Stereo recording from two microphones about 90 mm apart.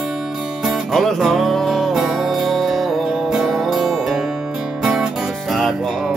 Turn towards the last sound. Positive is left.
turn(degrees=0)  # may be behind; listen again after turning